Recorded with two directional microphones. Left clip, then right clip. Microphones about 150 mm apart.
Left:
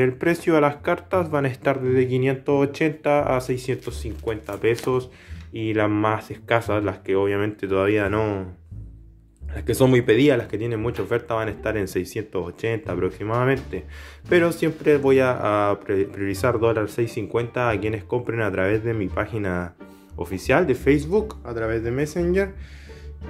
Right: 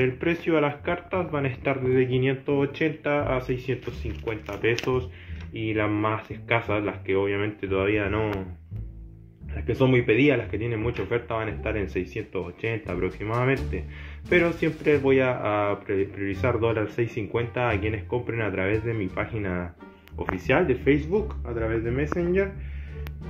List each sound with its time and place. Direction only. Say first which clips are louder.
0.0 s speech: left 4 dB; 35° left (ahead or behind)
1.9 s speech: even; 25° left (ahead or behind)
4.3 s speech: left 3 dB; 20° left (ahead or behind)
5.5 s speech: left 4 dB; 30° left (ahead or behind)
9.7 s speech: left 4 dB; 40° left (ahead or behind)
21.5 s speech: left 3 dB; 15° left (ahead or behind)